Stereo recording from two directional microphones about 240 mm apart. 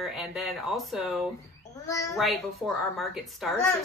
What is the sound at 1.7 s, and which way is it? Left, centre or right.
Speech, centre.